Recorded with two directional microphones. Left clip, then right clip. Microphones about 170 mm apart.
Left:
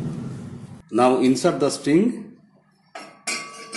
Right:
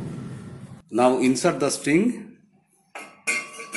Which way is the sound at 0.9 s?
Centre (ahead or behind).